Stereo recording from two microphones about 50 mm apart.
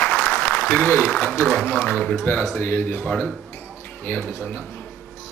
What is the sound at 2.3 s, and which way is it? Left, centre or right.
Speech, left.